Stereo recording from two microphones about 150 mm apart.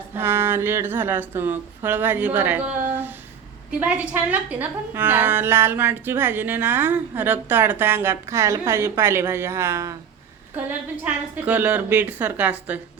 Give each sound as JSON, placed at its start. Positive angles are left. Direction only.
{"t": 0.2, "sound": "a woman's voice", "side_deg": -15}